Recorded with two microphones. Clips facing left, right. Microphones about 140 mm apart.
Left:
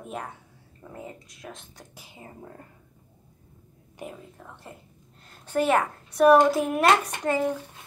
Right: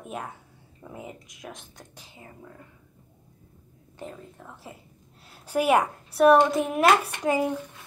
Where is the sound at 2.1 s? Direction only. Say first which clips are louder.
Left 3 dB; 30° left (ahead or behind).